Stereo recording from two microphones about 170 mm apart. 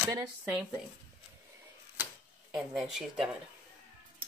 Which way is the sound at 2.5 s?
Centre (ahead or behind).